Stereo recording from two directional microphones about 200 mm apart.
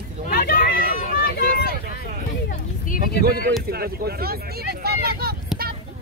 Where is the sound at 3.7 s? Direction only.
50° right (ahead or behind).